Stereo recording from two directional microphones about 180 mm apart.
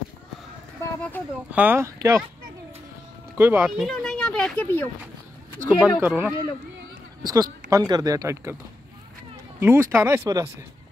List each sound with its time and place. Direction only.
1.5 s speech: 10° right (ahead or behind)
3.3 s speech: 10° right (ahead or behind); by 4.8 s 5° left (ahead or behind)
5.7 s speech: 5° right (ahead or behind)
7.2 s speech: 20° right (ahead or behind)
9.6 s speech: 15° right (ahead or behind)